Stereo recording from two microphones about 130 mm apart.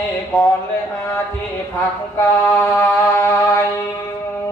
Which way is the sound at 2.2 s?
20° left (ahead or behind).